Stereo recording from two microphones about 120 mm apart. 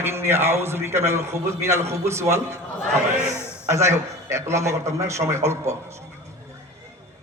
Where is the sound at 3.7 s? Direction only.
25° right (ahead or behind).